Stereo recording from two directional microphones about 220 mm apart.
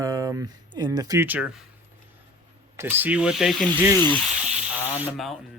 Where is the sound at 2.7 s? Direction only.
10° right (ahead or behind).